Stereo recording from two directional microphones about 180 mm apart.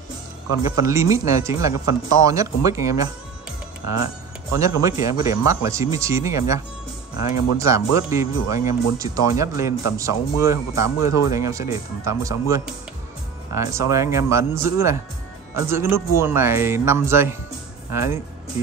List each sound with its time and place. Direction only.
0.7 s speech: 20° right (ahead or behind)
4.6 s speech: 20° right (ahead or behind)
7.5 s speech: 15° right (ahead or behind)